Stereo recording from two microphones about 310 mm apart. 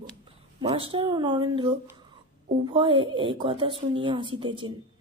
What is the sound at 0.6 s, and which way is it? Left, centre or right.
Speech, centre.